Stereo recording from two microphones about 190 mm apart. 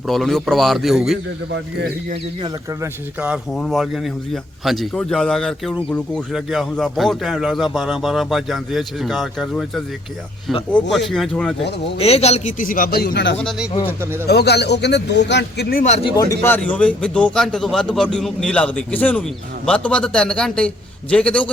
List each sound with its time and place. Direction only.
0.1 s speech: centre (ahead or behind)
2.8 s speech: 5° right (ahead or behind)
11.9 s a man's voice: 30° left (ahead or behind); by 15.8 s 60° left (ahead or behind)
16.3 s speech: 10° left (ahead or behind)